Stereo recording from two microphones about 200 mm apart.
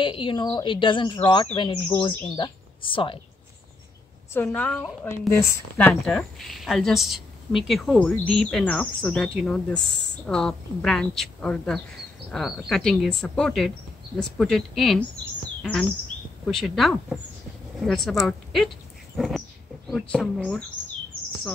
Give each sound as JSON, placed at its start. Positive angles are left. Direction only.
{"t": 0.0, "sound": "speech", "side_deg": 25}
{"t": 4.3, "sound": "a woman's voice", "side_deg": 10}
{"t": 16.4, "sound": "speech", "side_deg": 0}
{"t": 19.1, "sound": "a sound", "side_deg": 0}
{"t": 19.9, "sound": "speech", "side_deg": 0}